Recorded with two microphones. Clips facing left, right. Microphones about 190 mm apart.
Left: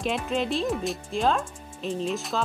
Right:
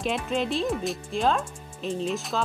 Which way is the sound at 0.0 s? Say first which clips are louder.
Even; centre (ahead or behind).